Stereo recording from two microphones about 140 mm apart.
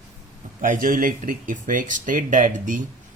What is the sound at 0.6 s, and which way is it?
Speech, 70° right (ahead or behind).